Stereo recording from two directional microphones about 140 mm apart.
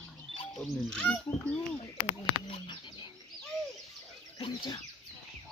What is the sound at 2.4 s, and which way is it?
Bird, 35° left (ahead or behind).